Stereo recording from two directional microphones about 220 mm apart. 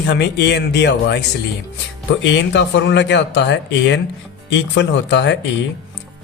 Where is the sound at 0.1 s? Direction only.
50° left (ahead or behind).